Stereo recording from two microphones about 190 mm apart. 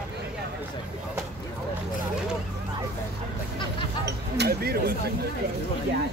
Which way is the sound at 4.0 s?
60° right (ahead or behind).